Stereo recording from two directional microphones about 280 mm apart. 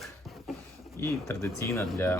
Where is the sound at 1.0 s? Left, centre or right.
Centre.